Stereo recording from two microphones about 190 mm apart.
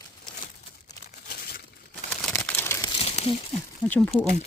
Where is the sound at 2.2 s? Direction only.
10° left (ahead or behind).